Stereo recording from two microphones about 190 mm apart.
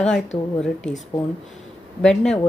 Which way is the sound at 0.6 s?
5° left (ahead or behind).